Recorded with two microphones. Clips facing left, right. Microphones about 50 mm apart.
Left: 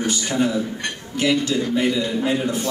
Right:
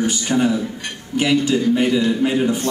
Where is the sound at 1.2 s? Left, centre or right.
Centre.